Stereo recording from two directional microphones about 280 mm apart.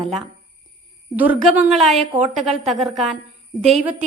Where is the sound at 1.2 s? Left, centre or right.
Centre.